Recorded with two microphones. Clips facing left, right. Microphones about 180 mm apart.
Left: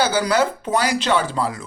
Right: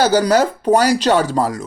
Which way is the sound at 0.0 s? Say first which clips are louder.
Right 5 dB; 40° right (ahead or behind).